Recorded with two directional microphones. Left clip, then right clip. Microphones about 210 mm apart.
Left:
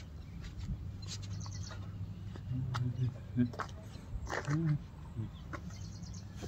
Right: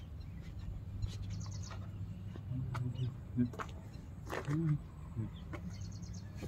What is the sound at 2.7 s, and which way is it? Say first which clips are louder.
Mouse: left 4 dB; 5° left (ahead or behind).